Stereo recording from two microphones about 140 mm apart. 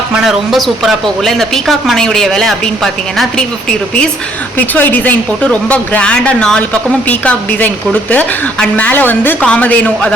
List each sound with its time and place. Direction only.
0.3 s a woman's voice: centre (ahead or behind)
4.5 s speech: 15° left (ahead or behind)